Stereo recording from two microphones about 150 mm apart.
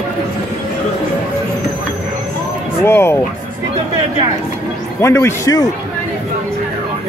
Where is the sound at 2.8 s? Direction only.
15° left (ahead or behind).